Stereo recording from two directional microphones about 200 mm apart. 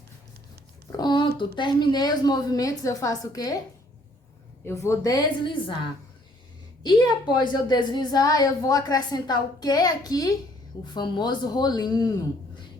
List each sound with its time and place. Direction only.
0.9 s a sound: 20° left (ahead or behind)
1.5 s a woman's voice: 20° left (ahead or behind)
4.6 s a woman's voice: 15° left (ahead or behind)
6.8 s a woman's voice: 20° left (ahead or behind)